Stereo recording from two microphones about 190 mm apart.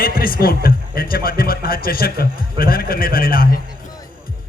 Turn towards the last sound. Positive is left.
turn(degrees=50)  # may be behind; listen again after turning